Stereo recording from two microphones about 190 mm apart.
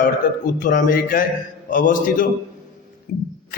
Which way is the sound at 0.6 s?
45° left (ahead or behind).